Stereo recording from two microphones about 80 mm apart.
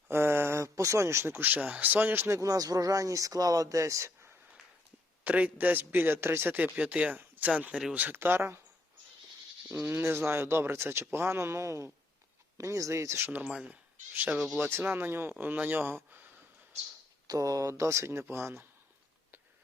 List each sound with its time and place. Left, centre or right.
0.1 s speech: right
2.4 s speech: right
5.2 s speech: centre
6.7 s speech: centre; by 8.6 s right
9.6 s speech: right
13.5 s speech: centre
14.7 s speech: right
17.2 s speech: right